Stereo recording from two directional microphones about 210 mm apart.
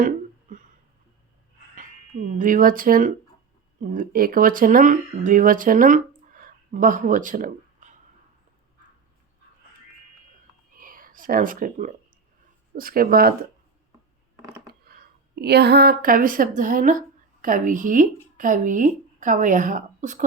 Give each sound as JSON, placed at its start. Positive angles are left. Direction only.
{"t": 2.3, "sound": "speech", "side_deg": -40}
{"t": 6.4, "sound": "a sound", "side_deg": -40}
{"t": 10.8, "sound": "speech", "side_deg": -40}
{"t": 14.7, "sound": "a woman's voice", "side_deg": -45}